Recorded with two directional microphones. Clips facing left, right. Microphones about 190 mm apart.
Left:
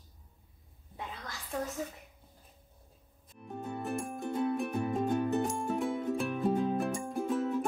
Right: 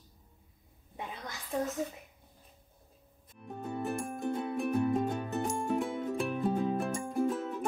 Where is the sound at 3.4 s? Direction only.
Centre (ahead or behind).